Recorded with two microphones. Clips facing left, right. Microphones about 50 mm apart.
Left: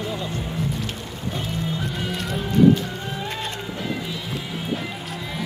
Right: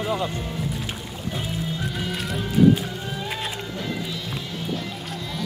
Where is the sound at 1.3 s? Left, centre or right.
Centre.